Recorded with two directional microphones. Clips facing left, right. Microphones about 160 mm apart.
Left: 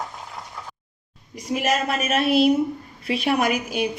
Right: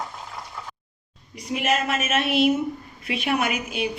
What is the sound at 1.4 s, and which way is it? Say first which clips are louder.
A woman's voice: left 1 dB; 45° left (ahead or behind).